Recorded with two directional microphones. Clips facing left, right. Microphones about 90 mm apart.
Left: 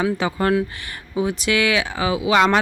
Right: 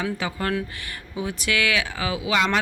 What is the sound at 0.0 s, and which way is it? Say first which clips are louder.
Speech: left 6 dB; 30° left (ahead or behind).